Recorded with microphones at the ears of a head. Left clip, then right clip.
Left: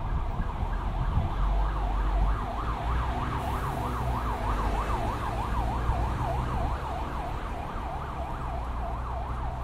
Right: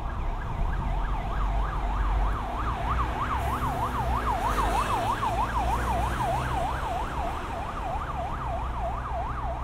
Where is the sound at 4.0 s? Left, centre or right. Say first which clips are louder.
Right 5 dB; right.